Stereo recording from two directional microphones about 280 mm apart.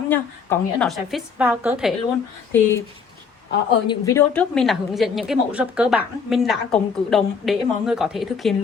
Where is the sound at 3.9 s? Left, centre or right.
Centre.